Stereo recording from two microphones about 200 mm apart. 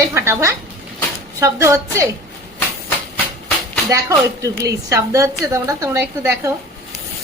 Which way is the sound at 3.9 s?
15° right (ahead or behind).